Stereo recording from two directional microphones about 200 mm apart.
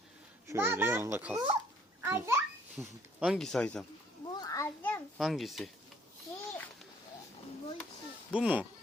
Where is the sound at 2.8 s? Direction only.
Centre (ahead or behind).